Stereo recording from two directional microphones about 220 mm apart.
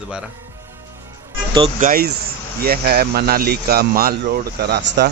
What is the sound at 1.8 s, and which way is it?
Speech, 45° right (ahead or behind).